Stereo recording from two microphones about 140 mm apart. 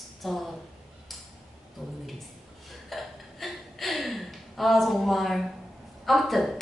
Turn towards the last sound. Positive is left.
turn(degrees=0)  # may be behind; listen again after turning